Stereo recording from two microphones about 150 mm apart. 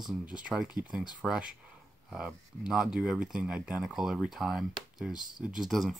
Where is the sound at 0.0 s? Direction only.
5° right (ahead or behind).